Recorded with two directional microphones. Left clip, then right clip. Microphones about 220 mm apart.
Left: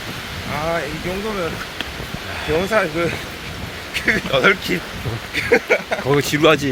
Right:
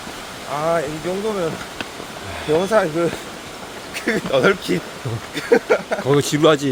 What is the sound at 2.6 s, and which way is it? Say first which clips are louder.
Speech: even; 25° right (ahead or behind).